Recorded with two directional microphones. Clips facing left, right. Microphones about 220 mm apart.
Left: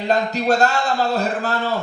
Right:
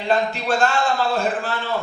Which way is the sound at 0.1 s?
40° left (ahead or behind).